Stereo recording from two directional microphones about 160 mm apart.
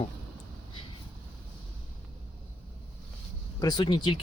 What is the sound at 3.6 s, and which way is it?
Speech, 30° left (ahead or behind).